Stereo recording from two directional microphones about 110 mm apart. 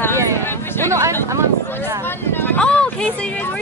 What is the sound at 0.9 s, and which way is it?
Speech, 25° right (ahead or behind).